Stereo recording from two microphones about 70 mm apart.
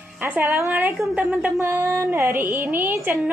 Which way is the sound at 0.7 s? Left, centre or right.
Right.